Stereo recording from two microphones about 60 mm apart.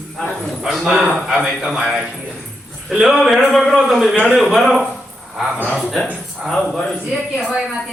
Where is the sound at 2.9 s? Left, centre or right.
Centre.